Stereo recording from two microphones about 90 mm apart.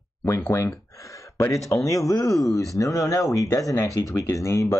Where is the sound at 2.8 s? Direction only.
40° left (ahead or behind).